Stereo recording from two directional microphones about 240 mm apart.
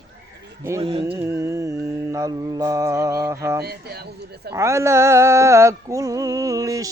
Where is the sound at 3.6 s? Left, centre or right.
Right.